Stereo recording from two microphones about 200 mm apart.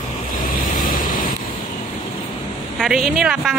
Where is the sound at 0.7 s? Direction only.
45° left (ahead or behind).